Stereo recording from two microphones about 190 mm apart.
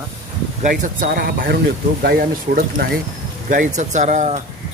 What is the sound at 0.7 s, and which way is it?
Speech, 45° right (ahead or behind).